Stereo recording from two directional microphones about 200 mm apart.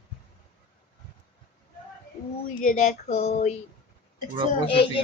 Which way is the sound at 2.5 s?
40° left (ahead or behind).